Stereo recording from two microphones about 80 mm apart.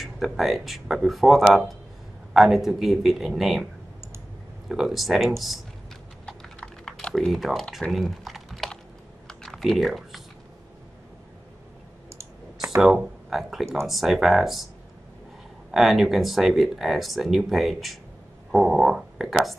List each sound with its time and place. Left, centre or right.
0.0 s speech: centre
4.6 s speech: centre
6.2 s typing: centre
12.7 s speech: centre
15.7 s speech: centre